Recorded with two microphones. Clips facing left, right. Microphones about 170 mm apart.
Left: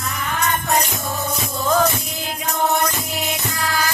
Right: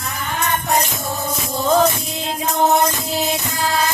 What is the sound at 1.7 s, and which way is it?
Music, 25° right (ahead or behind).